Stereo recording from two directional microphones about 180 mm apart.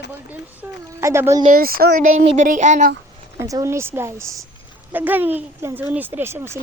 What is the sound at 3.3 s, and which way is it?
Speech, 15° right (ahead or behind).